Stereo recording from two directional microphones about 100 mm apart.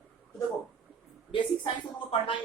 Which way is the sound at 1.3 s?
60° left (ahead or behind).